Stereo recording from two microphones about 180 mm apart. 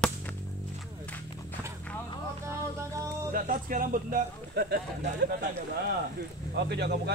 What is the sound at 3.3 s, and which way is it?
Speech, 50° right (ahead or behind).